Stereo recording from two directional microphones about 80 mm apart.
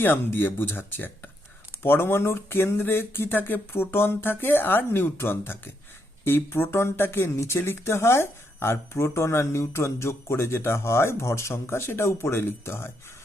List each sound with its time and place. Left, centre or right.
0.0 s speech: left